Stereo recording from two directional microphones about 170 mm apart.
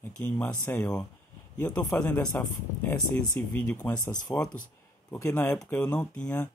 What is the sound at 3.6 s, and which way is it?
Speech, 10° left (ahead or behind).